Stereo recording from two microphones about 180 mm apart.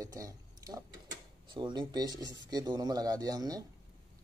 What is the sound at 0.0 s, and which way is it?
Speech, 20° right (ahead or behind).